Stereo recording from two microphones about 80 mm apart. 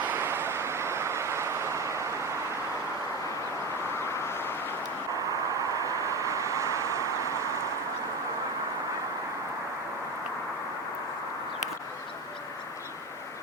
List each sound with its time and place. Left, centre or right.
0.2 s vehicle: right
4.0 s vehicle: left
5.5 s vehicle: right